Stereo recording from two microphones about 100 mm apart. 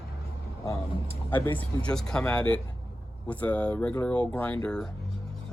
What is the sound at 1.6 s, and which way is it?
Speech, 10° left (ahead or behind).